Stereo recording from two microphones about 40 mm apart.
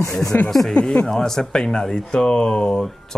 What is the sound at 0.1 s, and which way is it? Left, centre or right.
Speech, centre.